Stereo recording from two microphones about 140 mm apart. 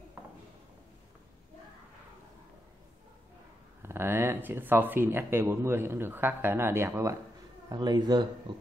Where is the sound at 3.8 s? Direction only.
15° right (ahead or behind).